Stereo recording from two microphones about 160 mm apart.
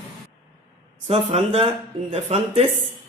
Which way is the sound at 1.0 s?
35° right (ahead or behind).